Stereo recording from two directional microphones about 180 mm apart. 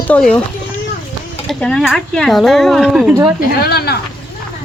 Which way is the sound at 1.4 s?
5° left (ahead or behind).